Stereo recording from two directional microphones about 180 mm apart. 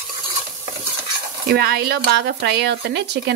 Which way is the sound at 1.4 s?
60° right (ahead or behind).